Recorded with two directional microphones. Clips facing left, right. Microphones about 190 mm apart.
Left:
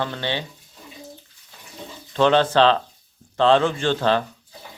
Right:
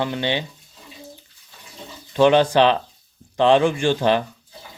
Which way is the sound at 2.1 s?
15° right (ahead or behind).